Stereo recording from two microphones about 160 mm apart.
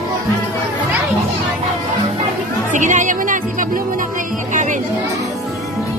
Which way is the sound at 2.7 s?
50° right (ahead or behind).